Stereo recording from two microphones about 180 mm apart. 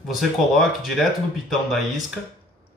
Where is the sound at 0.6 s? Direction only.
Centre (ahead or behind).